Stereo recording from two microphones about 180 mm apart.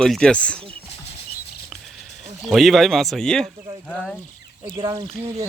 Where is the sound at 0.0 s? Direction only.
5° left (ahead or behind).